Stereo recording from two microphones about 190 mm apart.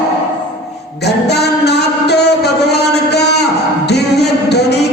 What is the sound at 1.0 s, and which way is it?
Music, 60° left (ahead or behind).